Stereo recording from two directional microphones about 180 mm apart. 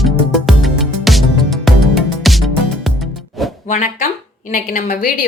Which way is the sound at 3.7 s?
45° left (ahead or behind).